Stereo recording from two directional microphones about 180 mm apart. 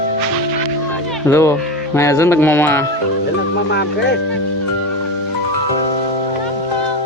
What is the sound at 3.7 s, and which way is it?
Speech, 70° left (ahead or behind).